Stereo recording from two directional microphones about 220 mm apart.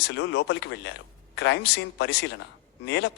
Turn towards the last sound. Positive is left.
turn(degrees=50)  # may be behind; listen again after turning